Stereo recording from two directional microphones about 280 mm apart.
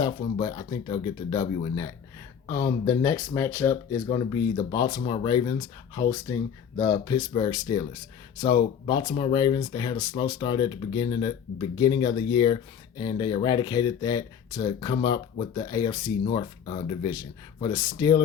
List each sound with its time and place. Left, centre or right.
0.0 s speech: centre